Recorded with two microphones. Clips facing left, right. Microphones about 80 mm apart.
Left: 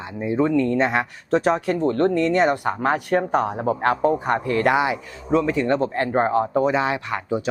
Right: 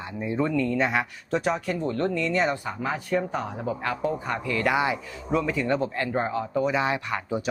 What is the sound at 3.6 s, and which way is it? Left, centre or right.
Speech, left.